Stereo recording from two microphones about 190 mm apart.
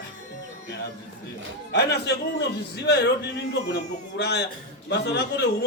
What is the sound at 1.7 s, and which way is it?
Speech, 60° left (ahead or behind).